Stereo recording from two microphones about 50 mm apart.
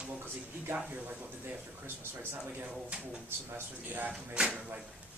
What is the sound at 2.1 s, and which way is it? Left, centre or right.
Speech, right.